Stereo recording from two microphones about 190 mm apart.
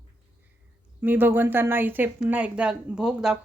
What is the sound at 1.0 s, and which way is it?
Speech, 10° right (ahead or behind).